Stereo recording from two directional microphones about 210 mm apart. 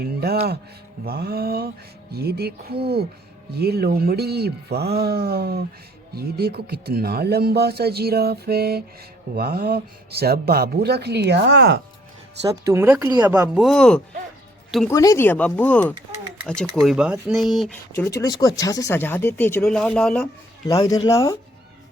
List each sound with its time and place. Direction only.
0.0 s speech: 50° right (ahead or behind)
12.5 s speech: 15° right (ahead or behind); by 14.0 s 5° left (ahead or behind)
14.8 s speech: 15° left (ahead or behind)
17.9 s speech: 15° left (ahead or behind)
20.7 s speech: 15° left (ahead or behind)